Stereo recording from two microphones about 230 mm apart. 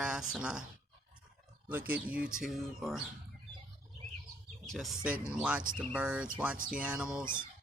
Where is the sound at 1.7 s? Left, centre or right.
Centre.